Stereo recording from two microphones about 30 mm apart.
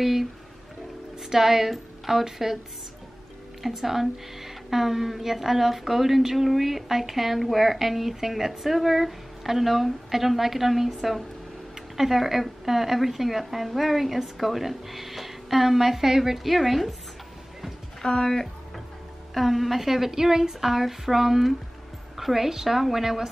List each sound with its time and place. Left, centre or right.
0.0 s a woman's voice: centre
3.6 s a woman's voice: centre
18.0 s speech: centre
19.3 s a woman's voice: centre